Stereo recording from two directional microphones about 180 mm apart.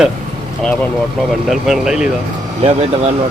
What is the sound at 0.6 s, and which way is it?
Speech, 5° left (ahead or behind).